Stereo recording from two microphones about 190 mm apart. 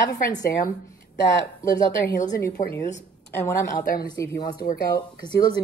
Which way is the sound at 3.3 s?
15° left (ahead or behind).